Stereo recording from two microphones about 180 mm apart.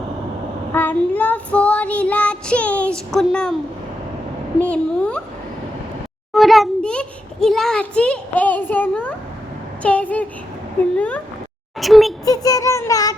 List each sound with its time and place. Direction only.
0.7 s child singing: 10° left (ahead or behind)
4.6 s a woman's voice: 5° left (ahead or behind)
6.3 s a child's voice: centre (ahead or behind)
12.2 s child singing: 20° left (ahead or behind)